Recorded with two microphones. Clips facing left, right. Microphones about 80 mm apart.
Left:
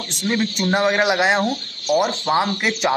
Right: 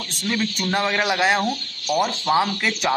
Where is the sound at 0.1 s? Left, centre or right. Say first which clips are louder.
Left 3 dB; left.